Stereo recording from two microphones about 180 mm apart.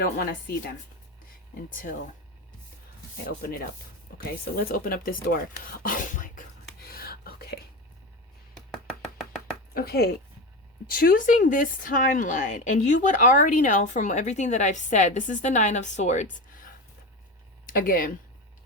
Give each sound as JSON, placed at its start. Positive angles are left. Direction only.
{"t": 0.0, "sound": "speech", "side_deg": 55}
{"t": 1.7, "sound": "speech", "side_deg": 45}
{"t": 3.2, "sound": "speech", "side_deg": 55}
{"t": 6.8, "sound": "whispering", "side_deg": 55}
{"t": 9.7, "sound": "speech", "side_deg": 60}
{"t": 17.7, "sound": "speech", "side_deg": 50}